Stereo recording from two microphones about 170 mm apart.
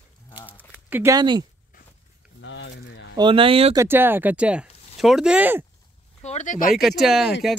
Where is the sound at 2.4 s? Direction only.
90° left.